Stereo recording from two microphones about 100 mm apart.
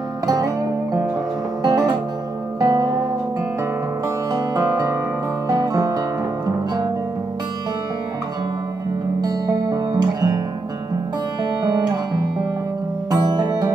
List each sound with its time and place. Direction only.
1.6 s music: 45° right (ahead or behind)
4.3 s music: 35° right (ahead or behind)
5.5 s guitar: 40° right (ahead or behind)
9.2 s music: 40° right (ahead or behind)
13.1 s music: 40° right (ahead or behind)